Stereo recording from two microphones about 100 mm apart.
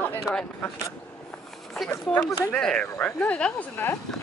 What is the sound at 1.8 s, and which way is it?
Speech, 10° left (ahead or behind).